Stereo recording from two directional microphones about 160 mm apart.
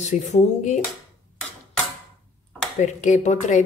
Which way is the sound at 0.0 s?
45° left (ahead or behind).